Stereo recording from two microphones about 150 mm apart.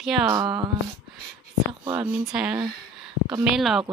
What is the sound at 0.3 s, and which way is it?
Speech, 25° right (ahead or behind).